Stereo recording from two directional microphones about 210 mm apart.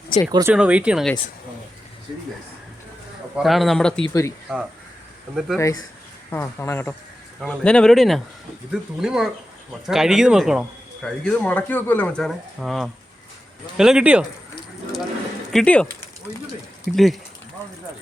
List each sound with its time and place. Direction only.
0.3 s speech: 20° right (ahead or behind)
0.5 s speech: 5° right (ahead or behind)
3.3 s speech: centre (ahead or behind)
4.1 s speech: 15° left (ahead or behind)
5.3 s speech: centre (ahead or behind)
6.3 s speech: 10° left (ahead or behind); by 14.3 s 5° right (ahead or behind)
15.5 s speech: 5° left (ahead or behind)